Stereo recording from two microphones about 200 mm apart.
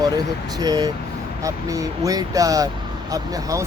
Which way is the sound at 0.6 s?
20° right (ahead or behind).